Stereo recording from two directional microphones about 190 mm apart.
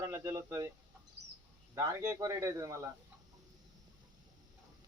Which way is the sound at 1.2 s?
65° right (ahead or behind).